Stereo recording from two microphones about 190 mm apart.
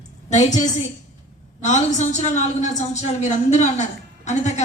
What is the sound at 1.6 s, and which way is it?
A woman's voice, 35° left (ahead or behind).